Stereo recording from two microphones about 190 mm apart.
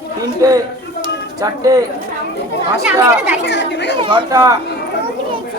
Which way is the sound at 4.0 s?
25° right (ahead or behind).